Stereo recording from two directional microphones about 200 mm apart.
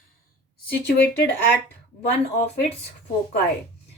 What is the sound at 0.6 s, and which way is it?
Speech, 55° left (ahead or behind).